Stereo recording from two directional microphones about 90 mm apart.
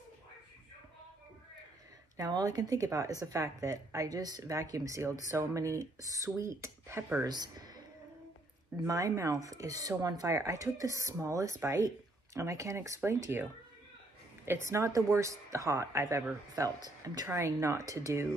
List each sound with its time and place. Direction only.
2.1 s a woman's voice: 40° right (ahead or behind); by 7.2 s 25° right (ahead or behind)
7.2 s speech: 50° right (ahead or behind)
8.8 s a woman's voice: 40° right (ahead or behind)
14.4 s a woman's voice: 30° right (ahead or behind)
17.3 s a woman's voice: 30° right (ahead or behind)